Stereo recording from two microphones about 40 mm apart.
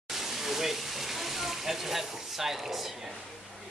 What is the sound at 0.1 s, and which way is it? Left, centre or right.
Speech, centre.